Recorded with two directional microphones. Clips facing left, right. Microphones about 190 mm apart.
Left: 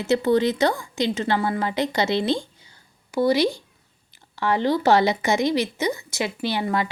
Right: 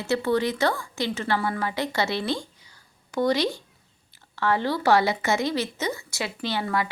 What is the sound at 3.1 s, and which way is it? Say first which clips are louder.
Speech: left 3 dB; 10° left (ahead or behind).